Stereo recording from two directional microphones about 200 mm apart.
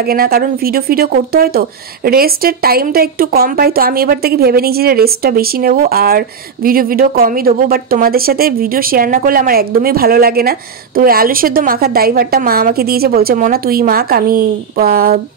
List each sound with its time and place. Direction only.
0.0 s speech: 50° right (ahead or behind)